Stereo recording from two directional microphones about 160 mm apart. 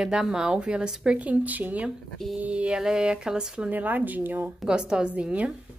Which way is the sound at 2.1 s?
Centre (ahead or behind).